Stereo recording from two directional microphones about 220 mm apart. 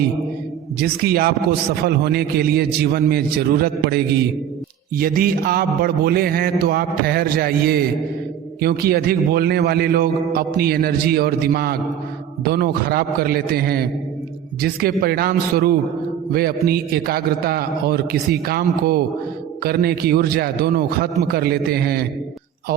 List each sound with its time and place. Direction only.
0.8 s a man's voice: 45° right (ahead or behind)